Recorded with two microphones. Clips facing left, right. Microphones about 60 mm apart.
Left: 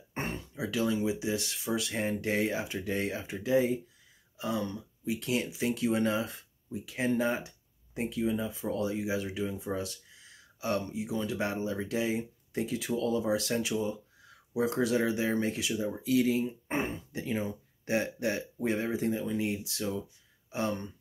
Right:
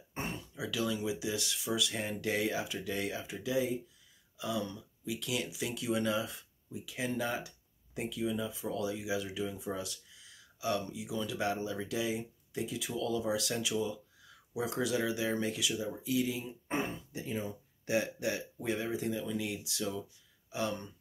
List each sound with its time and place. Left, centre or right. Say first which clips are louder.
0.1 s speech: left 3 dB; left
16.0 s speech: left 8 dB; left
16.4 s speech: left 3 dB; left
17.2 s speech: left 5 dB; left
17.8 s speech: left 2 dB; left